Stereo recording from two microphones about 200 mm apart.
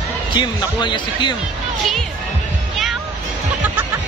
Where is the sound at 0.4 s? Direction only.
20° left (ahead or behind).